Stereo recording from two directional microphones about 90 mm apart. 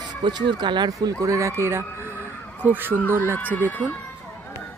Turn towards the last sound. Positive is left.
turn(degrees=20)  # may be behind; listen again after turning